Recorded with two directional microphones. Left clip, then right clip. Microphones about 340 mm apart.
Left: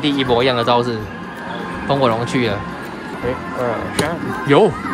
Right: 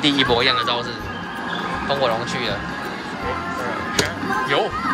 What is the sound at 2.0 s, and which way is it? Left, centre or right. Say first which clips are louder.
Speech: left 4 dB; centre.